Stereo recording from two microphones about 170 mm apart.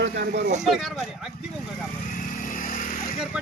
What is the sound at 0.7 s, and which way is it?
Speech, centre (ahead or behind).